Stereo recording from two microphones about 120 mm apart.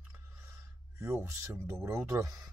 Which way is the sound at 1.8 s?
20° right (ahead or behind).